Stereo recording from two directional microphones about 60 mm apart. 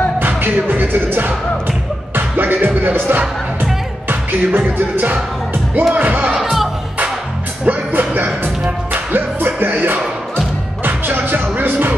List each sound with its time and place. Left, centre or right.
0.2 s music: right
5.9 s speech: right
6.3 s music: centre
7.6 s music: right